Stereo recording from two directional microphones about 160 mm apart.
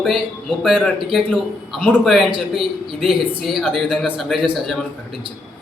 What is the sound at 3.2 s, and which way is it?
Speech, 35° right (ahead or behind).